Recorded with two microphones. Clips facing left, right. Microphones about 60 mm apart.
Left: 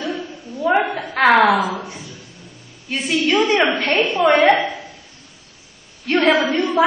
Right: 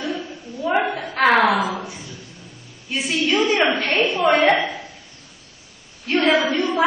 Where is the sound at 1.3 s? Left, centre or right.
Left.